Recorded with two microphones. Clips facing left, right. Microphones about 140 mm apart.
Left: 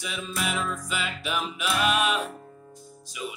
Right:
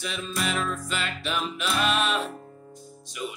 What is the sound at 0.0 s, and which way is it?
Music, 5° left (ahead or behind).